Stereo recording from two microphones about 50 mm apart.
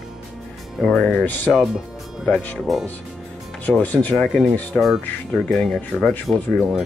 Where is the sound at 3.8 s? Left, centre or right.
Left.